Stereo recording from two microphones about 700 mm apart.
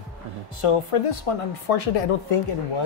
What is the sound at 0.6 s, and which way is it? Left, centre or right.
Speech, left.